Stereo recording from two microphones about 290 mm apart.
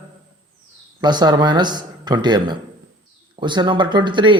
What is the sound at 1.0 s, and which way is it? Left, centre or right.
Speech, centre.